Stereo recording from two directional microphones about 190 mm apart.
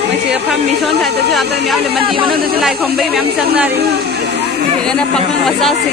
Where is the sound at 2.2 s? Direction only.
Centre (ahead or behind).